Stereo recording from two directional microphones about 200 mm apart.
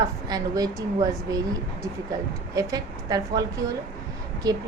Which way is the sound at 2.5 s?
20° right (ahead or behind).